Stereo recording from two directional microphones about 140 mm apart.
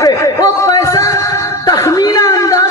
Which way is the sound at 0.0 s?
20° left (ahead or behind).